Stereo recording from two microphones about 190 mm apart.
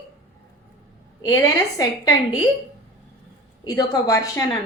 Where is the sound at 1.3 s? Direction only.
20° left (ahead or behind).